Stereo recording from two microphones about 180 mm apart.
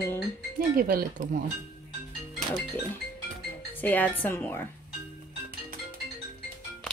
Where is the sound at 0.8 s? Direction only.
50° right (ahead or behind).